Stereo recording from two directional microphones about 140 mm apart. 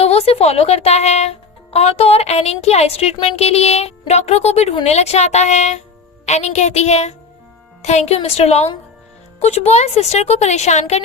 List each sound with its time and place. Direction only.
0.0 s speech: 45° left (ahead or behind)